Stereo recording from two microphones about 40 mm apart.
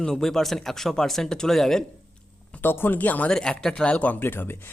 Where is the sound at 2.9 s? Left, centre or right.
Left.